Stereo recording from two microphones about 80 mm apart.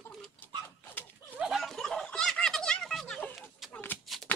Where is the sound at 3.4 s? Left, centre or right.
Centre.